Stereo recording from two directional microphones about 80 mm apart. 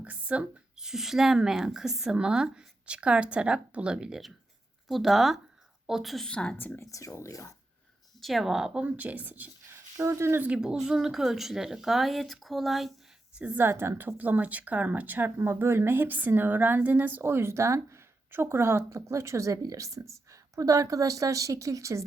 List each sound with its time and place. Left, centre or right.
0.0 s a woman's voice: centre
6.2 s a woman's voice: centre
6.9 s speech: left
8.2 s a woman's voice: centre; by 9.7 s right
10.0 s a woman's voice: right
10.4 s a woman's voice: centre
13.6 s a woman's voice: right
14.2 s a woman's voice: right